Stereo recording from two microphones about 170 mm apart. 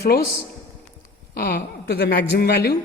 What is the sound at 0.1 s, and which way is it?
Speech, 65° left (ahead or behind).